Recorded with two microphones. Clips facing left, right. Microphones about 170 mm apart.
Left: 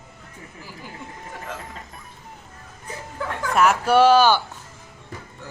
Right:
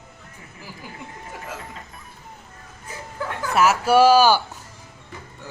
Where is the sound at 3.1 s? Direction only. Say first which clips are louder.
Even; 5° right (ahead or behind).